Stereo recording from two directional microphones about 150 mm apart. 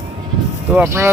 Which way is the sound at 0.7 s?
15° right (ahead or behind).